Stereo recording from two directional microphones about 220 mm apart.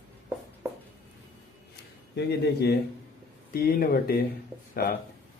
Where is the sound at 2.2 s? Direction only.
50° left (ahead or behind).